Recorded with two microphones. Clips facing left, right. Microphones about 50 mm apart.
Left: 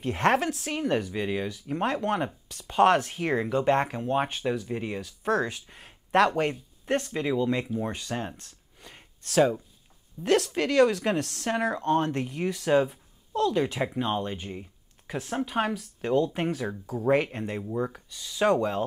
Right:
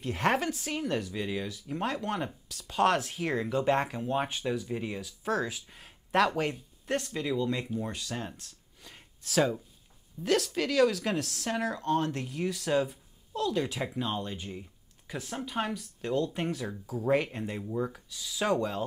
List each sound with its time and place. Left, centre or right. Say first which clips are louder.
0.1 s speech: left 4 dB; centre
0.7 s speech: left 4 dB; centre
1.5 s speech: left 5 dB; centre
7.1 s speech: left 4 dB; left
8.4 s a sound: left 2 dB; centre
10.2 s speech: left 4 dB; centre